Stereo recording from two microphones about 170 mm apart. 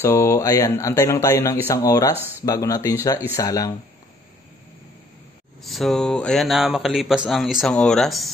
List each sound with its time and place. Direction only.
0.0 s speech: 15° left (ahead or behind)
5.6 s speech: centre (ahead or behind)